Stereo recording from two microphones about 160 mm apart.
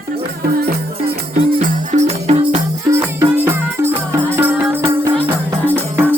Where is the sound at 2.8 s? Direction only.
15° right (ahead or behind).